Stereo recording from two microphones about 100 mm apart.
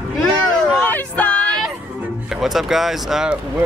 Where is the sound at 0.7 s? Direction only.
15° left (ahead or behind).